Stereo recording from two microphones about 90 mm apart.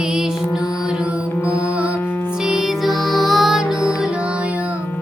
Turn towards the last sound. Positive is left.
turn(degrees=-5)  # may be behind; listen again after turning